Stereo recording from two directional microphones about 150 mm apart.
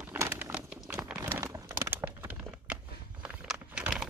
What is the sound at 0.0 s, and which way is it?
Crumpling, 15° right (ahead or behind).